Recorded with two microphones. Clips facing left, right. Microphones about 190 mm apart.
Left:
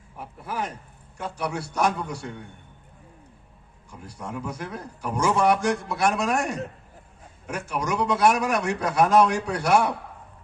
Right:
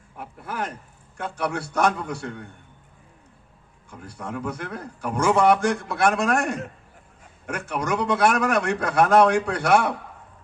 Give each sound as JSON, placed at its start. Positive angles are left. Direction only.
{"t": 1.1, "sound": "a man's voice", "side_deg": -60}
{"t": 4.0, "sound": "a man's voice", "side_deg": -55}